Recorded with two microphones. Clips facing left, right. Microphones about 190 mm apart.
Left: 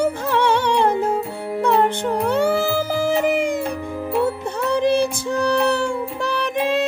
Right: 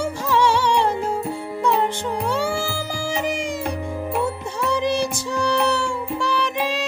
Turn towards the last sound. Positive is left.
turn(degrees=55)  # may be behind; listen again after turning